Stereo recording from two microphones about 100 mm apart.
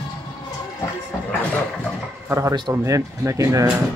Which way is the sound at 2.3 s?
30° right (ahead or behind).